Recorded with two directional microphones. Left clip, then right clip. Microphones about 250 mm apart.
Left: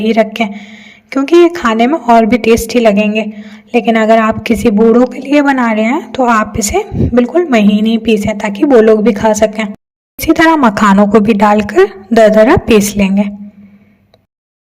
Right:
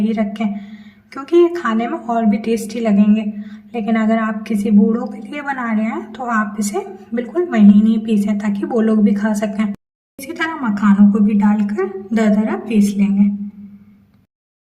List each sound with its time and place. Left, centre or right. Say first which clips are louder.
0.0 s a woman's voice: left 10 dB; left